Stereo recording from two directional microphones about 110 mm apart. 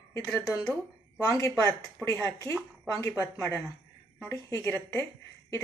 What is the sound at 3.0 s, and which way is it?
A woman's voice, 30° left (ahead or behind).